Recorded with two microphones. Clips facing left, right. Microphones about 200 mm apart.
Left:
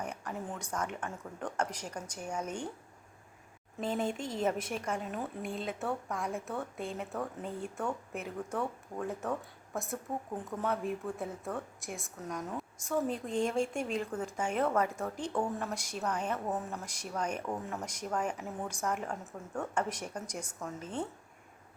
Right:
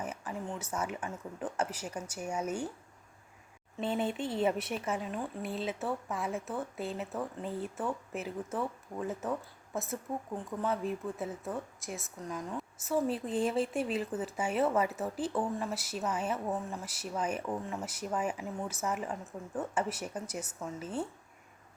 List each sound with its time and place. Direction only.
0.0 s speech: 5° right (ahead or behind)
4.0 s speech: 45° left (ahead or behind)
4.7 s a woman's voice: 5° right (ahead or behind)